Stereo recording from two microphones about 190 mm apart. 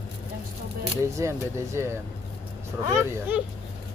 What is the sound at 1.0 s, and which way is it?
Speech, 15° right (ahead or behind).